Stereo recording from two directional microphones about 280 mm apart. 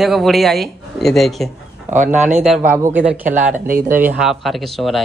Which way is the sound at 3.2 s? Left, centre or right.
Right.